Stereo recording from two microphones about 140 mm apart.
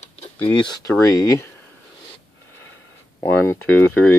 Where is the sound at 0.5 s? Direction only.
30° left (ahead or behind).